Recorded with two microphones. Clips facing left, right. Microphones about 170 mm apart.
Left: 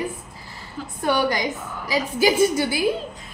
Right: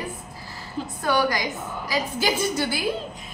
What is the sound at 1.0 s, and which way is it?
Speech, 25° left (ahead or behind).